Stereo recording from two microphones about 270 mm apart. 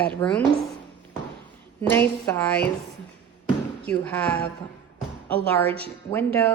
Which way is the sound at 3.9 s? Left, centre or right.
Centre.